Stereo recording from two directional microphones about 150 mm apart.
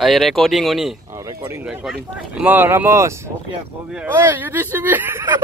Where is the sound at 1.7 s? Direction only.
5° right (ahead or behind).